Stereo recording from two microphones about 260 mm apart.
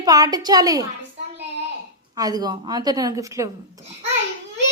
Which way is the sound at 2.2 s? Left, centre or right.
Centre.